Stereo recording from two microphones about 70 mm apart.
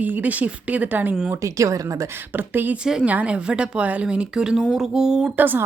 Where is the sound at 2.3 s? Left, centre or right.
Right; by 5.3 s centre.